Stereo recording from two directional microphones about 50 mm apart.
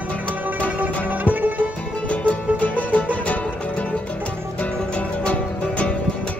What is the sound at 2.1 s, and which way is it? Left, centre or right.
Music, left.